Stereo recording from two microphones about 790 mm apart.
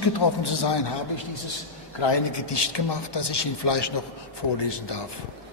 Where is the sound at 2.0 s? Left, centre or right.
Left.